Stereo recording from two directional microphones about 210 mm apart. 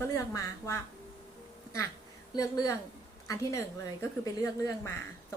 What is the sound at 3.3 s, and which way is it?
Speech, 15° left (ahead or behind).